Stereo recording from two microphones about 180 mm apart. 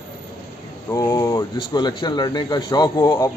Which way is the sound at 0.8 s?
15° left (ahead or behind).